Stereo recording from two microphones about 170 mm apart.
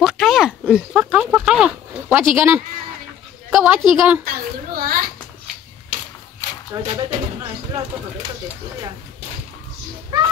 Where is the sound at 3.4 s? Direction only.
5° right (ahead or behind).